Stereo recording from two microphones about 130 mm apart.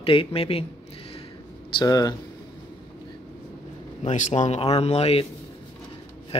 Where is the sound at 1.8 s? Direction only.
30° left (ahead or behind).